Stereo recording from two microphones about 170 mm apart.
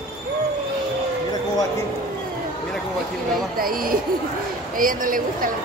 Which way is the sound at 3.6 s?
55° right (ahead or behind).